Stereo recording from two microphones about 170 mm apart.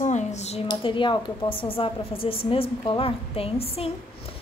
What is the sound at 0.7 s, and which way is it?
A woman's voice, 30° left (ahead or behind).